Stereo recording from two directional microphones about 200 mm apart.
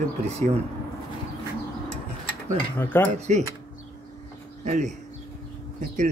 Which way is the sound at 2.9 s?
10° left (ahead or behind).